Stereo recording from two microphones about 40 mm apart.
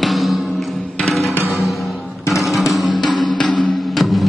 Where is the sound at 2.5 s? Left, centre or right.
Centre.